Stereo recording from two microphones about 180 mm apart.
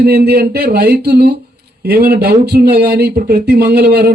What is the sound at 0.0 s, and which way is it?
Speech, 60° right (ahead or behind).